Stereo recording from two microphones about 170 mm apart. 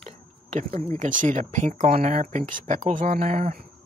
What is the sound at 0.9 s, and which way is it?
Speech, 50° right (ahead or behind).